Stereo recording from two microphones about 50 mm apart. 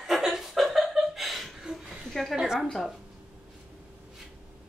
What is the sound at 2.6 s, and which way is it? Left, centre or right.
Speech, centre.